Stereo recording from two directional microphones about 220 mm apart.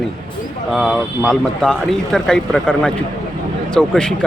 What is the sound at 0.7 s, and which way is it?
Speech, centre (ahead or behind).